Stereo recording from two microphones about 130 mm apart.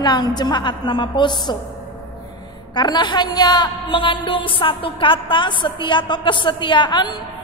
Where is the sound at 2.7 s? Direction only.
35° left (ahead or behind).